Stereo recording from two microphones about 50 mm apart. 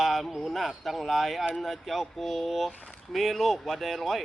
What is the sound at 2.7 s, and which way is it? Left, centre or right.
Speech, left.